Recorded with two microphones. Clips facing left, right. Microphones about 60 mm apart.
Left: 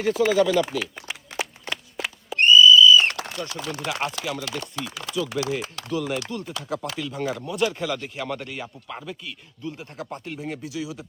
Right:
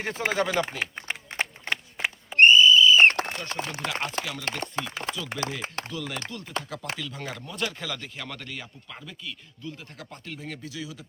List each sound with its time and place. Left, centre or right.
0.0 s a sound: right
4.4 s speech: right
5.9 s speech: left
6.4 s speech: right
7.0 s speech: left
10.3 s speech: centre